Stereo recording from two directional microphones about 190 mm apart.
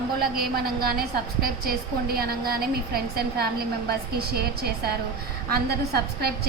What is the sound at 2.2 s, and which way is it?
A woman's voice, 50° right (ahead or behind).